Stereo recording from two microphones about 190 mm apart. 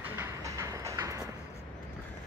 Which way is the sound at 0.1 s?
15° right (ahead or behind).